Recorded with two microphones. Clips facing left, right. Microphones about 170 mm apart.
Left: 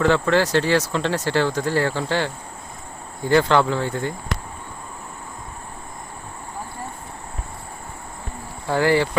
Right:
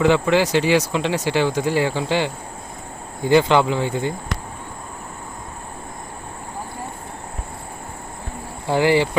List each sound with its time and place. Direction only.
0.0 s speech: 15° right (ahead or behind)
8.6 s speech: 25° right (ahead or behind)